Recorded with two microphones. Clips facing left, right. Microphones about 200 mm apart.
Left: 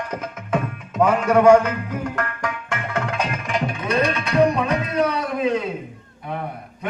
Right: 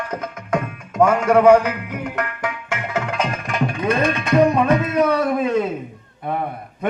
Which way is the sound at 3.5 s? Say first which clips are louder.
Right 3 dB; 50° right (ahead or behind).